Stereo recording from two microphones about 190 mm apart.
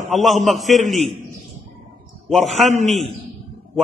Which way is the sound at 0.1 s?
Centre (ahead or behind).